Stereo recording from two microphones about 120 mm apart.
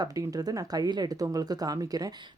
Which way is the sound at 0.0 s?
30° right (ahead or behind).